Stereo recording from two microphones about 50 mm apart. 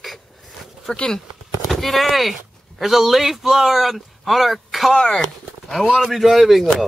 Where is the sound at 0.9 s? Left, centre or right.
Centre.